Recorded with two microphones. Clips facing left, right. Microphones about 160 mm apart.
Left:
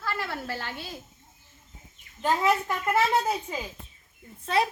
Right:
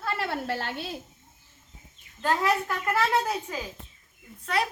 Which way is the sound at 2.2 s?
15° left (ahead or behind).